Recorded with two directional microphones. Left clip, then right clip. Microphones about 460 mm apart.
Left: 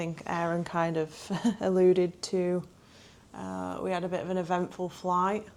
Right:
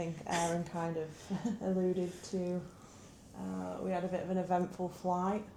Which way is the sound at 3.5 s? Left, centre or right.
Left.